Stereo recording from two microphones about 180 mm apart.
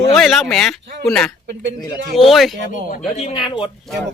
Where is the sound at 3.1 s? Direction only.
30° left (ahead or behind).